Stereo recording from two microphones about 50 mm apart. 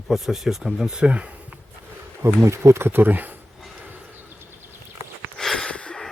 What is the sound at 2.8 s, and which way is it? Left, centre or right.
Speech, right.